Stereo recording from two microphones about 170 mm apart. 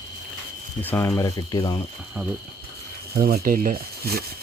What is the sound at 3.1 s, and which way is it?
Speech, 60° right (ahead or behind).